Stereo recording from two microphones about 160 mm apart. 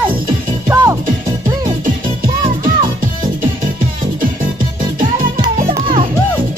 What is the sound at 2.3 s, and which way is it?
Music, 30° right (ahead or behind).